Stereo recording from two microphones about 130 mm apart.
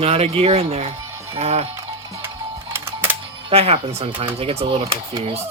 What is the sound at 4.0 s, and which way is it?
Speech, 40° right (ahead or behind).